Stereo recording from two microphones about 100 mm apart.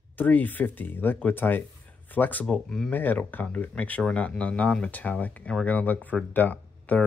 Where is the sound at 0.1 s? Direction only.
15° left (ahead or behind).